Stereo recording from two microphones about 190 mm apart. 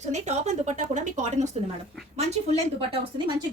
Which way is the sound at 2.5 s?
30° right (ahead or behind).